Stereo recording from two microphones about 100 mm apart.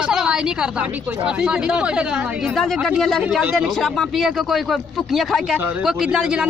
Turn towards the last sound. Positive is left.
turn(degrees=-10)  # may be behind; listen again after turning